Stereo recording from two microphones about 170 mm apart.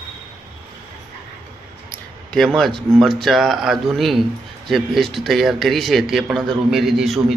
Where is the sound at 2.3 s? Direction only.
Centre (ahead or behind).